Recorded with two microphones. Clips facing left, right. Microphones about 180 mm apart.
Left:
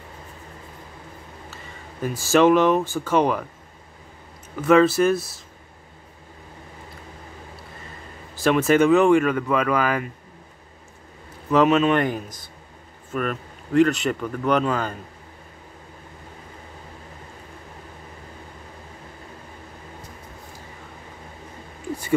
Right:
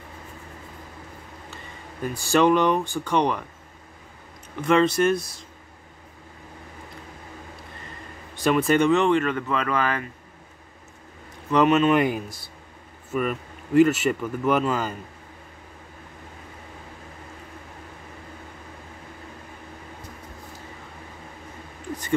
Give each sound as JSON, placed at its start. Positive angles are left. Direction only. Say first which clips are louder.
{"t": 2.3, "sound": "speech", "louder": "left 3 dB", "side_deg": 5}
{"t": 4.6, "sound": "speech", "louder": "left 3 dB", "side_deg": 5}
{"t": 8.4, "sound": "speech", "louder": "left 2 dB", "side_deg": 0}
{"t": 11.5, "sound": "speech", "louder": "left 1 dB", "side_deg": 0}